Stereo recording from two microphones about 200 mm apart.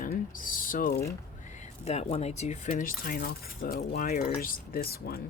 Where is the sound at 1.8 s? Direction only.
30° left (ahead or behind).